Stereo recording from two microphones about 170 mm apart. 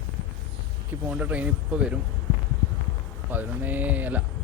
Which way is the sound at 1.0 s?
10° right (ahead or behind).